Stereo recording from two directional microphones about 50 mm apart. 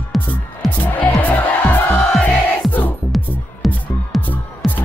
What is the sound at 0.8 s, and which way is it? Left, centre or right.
Music, left.